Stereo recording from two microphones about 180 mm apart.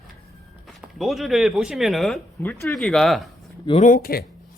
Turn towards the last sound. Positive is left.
turn(degrees=55)  # may be behind; listen again after turning